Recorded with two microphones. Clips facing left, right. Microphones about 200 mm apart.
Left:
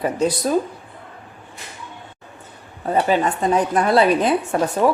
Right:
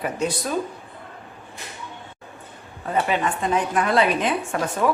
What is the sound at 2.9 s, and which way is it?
A woman's voice, 35° left (ahead or behind).